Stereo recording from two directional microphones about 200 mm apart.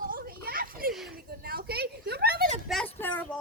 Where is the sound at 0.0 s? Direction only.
45° right (ahead or behind).